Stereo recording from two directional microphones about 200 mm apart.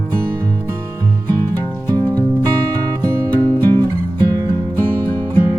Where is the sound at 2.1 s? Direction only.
15° right (ahead or behind).